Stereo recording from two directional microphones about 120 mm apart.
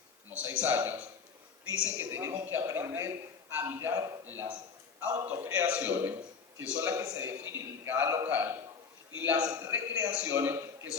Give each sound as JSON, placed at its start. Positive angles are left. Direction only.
{"t": 0.3, "sound": "a man's voice", "side_deg": -15}
{"t": 2.0, "sound": "a man's voice", "side_deg": -20}